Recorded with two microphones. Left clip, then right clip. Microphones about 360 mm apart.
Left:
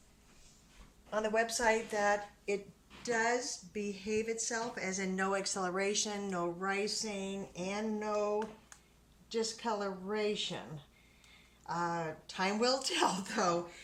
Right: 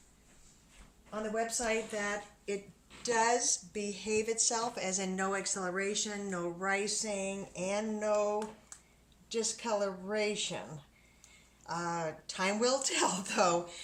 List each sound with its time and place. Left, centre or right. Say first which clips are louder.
1.1 s a woman's voice: left 3 dB; left
3.0 s a woman's voice: right 3 dB; centre
11.6 s speech: even; centre